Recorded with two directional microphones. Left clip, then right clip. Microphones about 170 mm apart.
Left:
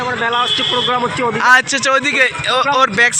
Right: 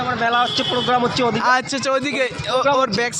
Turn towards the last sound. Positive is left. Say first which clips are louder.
# left 5 dB
turn(degrees=-5)  # may be behind; listen again after turning